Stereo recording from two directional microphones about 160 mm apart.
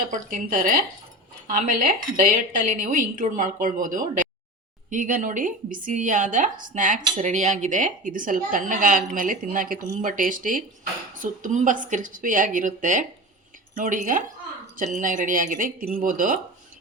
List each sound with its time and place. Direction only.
0.1 s a woman's voice: 55° right (ahead or behind)